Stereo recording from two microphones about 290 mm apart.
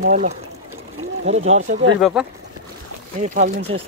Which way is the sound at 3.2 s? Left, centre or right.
Right.